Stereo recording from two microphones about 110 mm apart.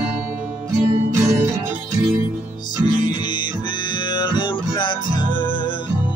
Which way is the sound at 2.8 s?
45° left (ahead or behind).